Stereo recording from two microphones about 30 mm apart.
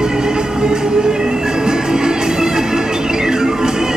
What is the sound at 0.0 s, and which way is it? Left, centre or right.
Music, right.